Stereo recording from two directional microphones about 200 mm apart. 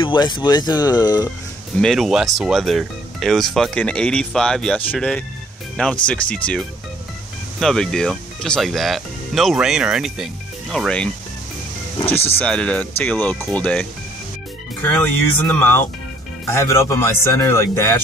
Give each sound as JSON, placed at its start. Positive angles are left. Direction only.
{"t": 0.0, "sound": "speech", "side_deg": 25}
{"t": 1.8, "sound": "speech", "side_deg": 0}
{"t": 7.6, "sound": "speech", "side_deg": 5}
{"t": 12.4, "sound": "speech", "side_deg": 5}